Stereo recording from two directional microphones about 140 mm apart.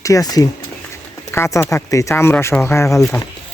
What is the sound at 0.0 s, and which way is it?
Speech, 25° left (ahead or behind).